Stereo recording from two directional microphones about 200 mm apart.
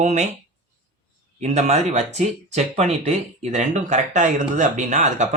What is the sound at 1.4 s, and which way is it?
Speech, 35° right (ahead or behind).